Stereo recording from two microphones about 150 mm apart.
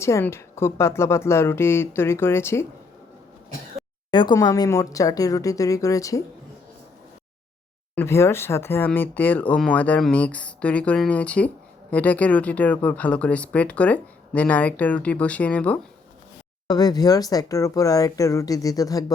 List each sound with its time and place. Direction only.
0.0 s speech: 15° left (ahead or behind)
4.1 s speech: 30° left (ahead or behind)
7.9 s speech: 15° left (ahead or behind)
16.6 s speech: 25° left (ahead or behind)